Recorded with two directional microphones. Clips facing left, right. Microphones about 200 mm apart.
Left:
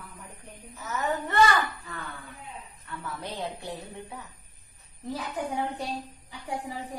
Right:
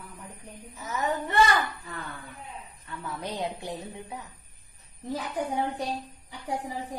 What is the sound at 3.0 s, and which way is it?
A woman's voice, 20° right (ahead or behind).